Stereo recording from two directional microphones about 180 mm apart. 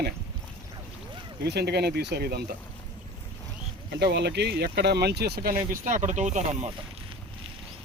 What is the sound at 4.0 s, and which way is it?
Speech, 70° right (ahead or behind).